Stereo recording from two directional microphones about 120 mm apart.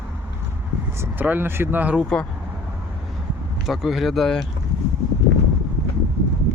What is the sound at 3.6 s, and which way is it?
Speech, centre (ahead or behind).